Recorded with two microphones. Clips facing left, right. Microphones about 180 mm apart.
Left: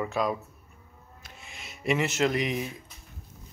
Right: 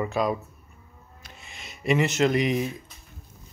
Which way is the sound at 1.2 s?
5° left (ahead or behind).